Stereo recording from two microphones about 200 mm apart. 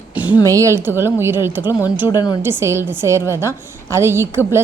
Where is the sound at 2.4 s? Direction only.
10° right (ahead or behind).